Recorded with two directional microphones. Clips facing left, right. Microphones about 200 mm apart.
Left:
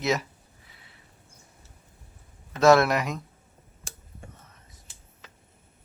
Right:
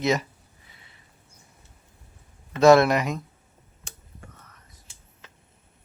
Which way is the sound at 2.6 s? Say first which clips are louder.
Right 3 dB; centre (ahead or behind).